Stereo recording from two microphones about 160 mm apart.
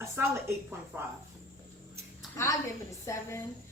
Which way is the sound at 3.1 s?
15° left (ahead or behind).